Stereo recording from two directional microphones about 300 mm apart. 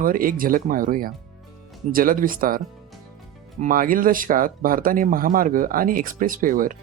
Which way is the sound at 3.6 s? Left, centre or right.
Right.